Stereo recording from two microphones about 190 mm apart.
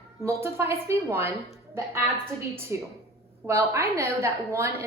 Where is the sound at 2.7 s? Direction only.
15° right (ahead or behind).